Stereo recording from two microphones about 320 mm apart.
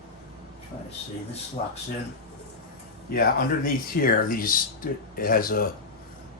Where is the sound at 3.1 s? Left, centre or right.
Left.